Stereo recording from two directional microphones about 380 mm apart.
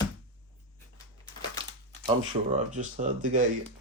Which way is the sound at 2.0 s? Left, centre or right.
Centre.